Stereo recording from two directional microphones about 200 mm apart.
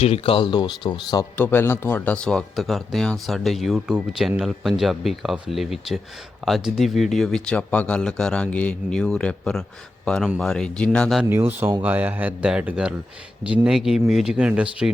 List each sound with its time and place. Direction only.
0.0 s speech: 30° left (ahead or behind); by 11.3 s centre (ahead or behind)
11.3 s speech: 10° right (ahead or behind)